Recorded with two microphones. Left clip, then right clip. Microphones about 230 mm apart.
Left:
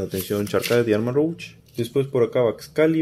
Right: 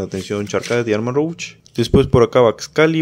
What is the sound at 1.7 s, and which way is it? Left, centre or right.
Speech, right.